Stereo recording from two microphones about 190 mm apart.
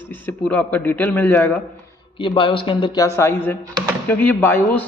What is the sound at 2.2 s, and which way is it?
Speech, 25° left (ahead or behind).